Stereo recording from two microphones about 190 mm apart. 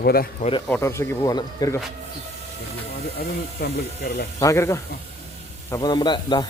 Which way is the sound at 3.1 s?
60° left (ahead or behind).